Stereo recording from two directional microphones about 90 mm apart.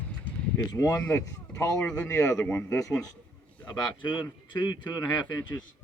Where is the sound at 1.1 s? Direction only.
35° left (ahead or behind).